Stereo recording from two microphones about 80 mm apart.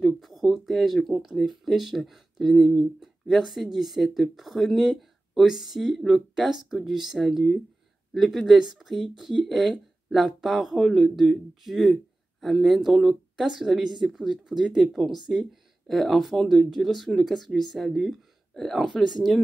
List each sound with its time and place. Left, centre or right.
0.0 s speech: centre